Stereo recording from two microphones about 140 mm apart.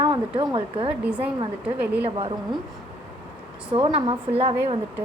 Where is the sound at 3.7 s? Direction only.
40° right (ahead or behind).